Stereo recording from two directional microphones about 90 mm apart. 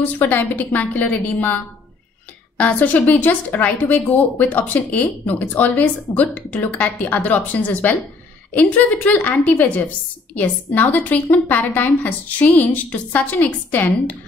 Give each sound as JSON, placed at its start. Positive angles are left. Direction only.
{"t": 0.0, "sound": "a woman's voice", "side_deg": 20}